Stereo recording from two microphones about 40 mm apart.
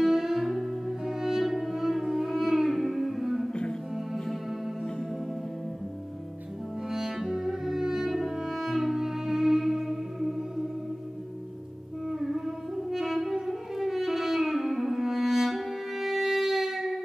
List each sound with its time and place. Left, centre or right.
0.0 s music: centre
6.9 s music: centre
12.1 s music: centre